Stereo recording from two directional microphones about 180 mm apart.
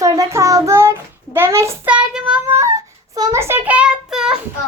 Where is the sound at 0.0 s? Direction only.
15° right (ahead or behind).